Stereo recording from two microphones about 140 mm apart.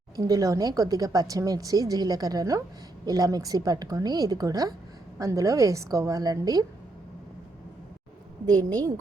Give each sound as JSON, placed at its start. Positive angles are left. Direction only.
{"t": 0.2, "sound": "a woman's voice", "side_deg": -25}